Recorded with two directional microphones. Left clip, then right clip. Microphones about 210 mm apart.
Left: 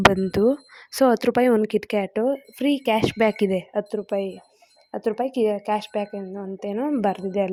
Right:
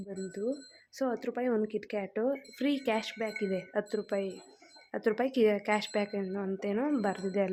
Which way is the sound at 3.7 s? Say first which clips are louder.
Left 8 dB; 20° left (ahead or behind).